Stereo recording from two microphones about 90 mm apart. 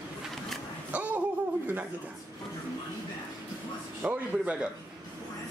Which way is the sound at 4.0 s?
20° right (ahead or behind).